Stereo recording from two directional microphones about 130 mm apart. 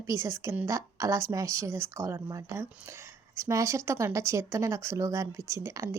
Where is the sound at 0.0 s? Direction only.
25° right (ahead or behind).